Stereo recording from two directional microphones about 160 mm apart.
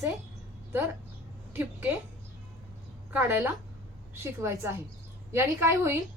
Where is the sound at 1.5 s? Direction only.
5° right (ahead or behind).